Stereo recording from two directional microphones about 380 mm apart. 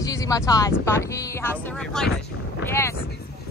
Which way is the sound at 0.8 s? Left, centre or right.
Centre.